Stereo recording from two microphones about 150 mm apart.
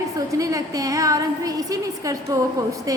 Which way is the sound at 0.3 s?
20° right (ahead or behind).